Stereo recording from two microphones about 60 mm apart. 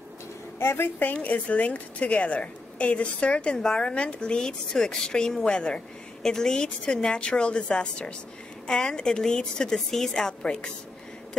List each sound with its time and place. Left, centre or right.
0.6 s a woman's voice: left
1.1 s a woman's voice: left